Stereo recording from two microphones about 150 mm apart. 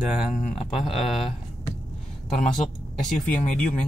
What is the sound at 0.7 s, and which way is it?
Speech, centre (ahead or behind).